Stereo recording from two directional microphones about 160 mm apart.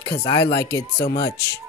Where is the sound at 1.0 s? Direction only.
90° left.